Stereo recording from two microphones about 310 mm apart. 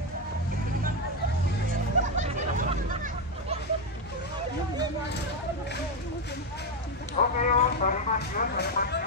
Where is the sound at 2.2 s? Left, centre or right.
Right.